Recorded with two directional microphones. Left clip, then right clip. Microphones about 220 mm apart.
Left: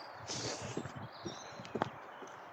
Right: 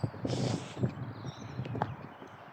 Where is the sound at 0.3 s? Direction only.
20° right (ahead or behind).